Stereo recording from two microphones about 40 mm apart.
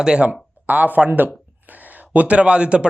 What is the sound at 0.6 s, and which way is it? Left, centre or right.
Speech, right.